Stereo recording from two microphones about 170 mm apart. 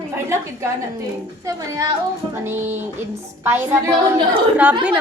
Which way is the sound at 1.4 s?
20° right (ahead or behind).